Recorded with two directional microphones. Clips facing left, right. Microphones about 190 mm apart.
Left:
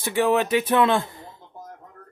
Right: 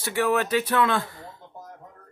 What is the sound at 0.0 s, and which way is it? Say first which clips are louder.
Speech: left 3 dB; 20° left (ahead or behind).